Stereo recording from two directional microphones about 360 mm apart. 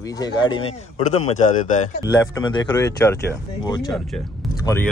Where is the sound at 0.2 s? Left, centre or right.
Centre.